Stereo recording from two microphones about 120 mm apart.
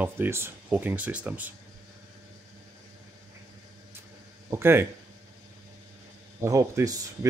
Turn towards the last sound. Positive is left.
turn(degrees=-25)  # may be behind; listen again after turning